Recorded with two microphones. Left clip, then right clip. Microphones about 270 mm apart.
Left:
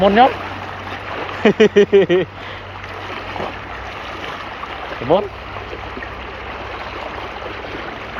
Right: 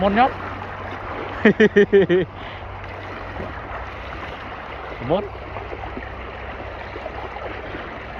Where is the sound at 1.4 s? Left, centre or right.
Centre.